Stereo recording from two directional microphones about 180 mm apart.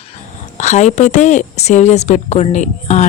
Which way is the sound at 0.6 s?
40° left (ahead or behind).